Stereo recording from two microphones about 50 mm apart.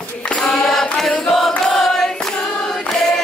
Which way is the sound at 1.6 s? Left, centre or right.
Centre.